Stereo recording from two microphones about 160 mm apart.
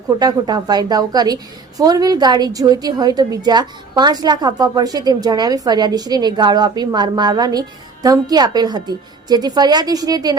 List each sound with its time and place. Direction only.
0.2 s a woman's voice: 25° right (ahead or behind)